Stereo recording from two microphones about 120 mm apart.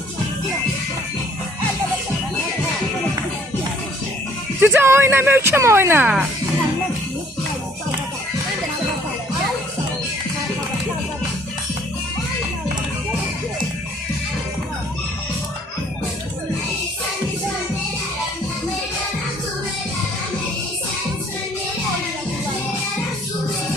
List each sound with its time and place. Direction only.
4.6 s speech: 20° right (ahead or behind)